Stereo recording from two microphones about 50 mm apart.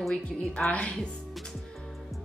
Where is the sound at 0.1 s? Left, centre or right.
Left.